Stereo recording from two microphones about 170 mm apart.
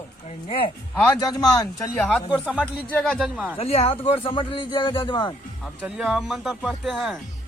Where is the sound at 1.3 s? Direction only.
25° left (ahead or behind).